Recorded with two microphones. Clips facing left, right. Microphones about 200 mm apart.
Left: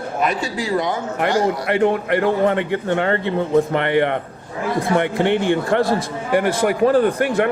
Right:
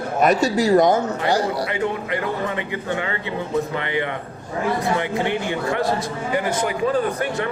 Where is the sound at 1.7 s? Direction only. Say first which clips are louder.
Left 7 dB; 65° left (ahead or behind).